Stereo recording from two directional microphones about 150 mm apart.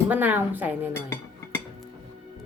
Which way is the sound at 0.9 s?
15° left (ahead or behind).